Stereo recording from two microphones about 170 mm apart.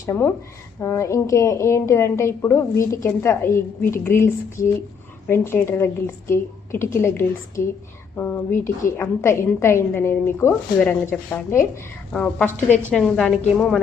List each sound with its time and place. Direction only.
0.0 s a woman's voice: 15° left (ahead or behind)